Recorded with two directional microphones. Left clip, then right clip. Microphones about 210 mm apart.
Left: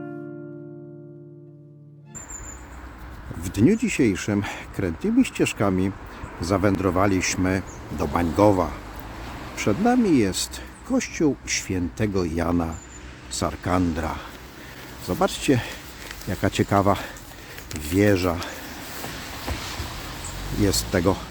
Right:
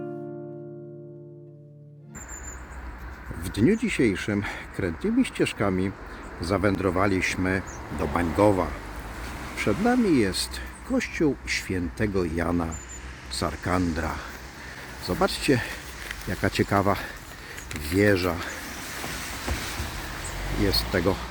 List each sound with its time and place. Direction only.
3.4 s speech: 15° left (ahead or behind)
9.2 s vehicle: 55° right (ahead or behind)
9.8 s speech: 10° left (ahead or behind)
19.1 s a sound: 55° right (ahead or behind)
20.7 s speech: 20° left (ahead or behind)